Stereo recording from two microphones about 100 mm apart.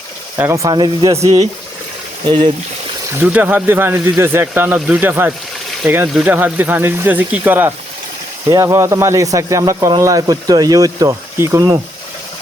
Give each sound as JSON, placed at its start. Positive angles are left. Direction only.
{"t": 0.4, "sound": "speech", "side_deg": -20}
{"t": 0.7, "sound": "speech", "side_deg": -45}
{"t": 1.2, "sound": "speech", "side_deg": -35}
{"t": 3.2, "sound": "speech", "side_deg": -20}